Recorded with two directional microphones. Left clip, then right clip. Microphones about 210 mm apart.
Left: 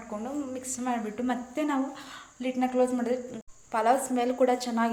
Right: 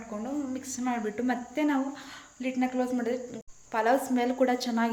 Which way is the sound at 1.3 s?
10° right (ahead or behind).